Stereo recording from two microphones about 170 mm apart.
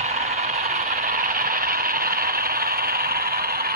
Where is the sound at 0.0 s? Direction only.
40° right (ahead or behind).